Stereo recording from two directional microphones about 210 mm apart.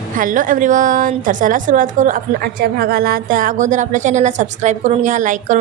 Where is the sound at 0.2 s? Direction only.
40° right (ahead or behind).